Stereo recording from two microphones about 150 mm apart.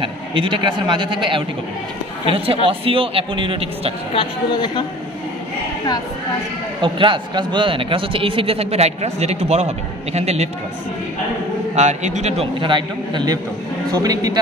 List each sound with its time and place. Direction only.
0.0 s a man's voice: 35° right (ahead or behind)
4.1 s speech: 35° left (ahead or behind)
6.8 s speech: 35° right (ahead or behind)
11.7 s a man's voice: 50° right (ahead or behind); by 14.4 s 25° right (ahead or behind)